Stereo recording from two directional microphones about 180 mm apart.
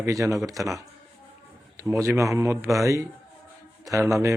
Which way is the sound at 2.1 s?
15° right (ahead or behind).